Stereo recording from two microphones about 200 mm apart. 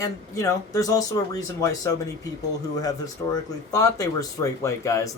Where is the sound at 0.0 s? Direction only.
15° left (ahead or behind).